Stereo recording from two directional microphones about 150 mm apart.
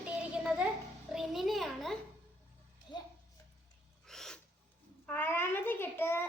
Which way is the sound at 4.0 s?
5° left (ahead or behind).